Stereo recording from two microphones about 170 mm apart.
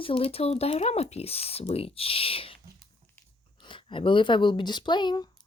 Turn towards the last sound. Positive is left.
turn(degrees=25)  # may be behind; listen again after turning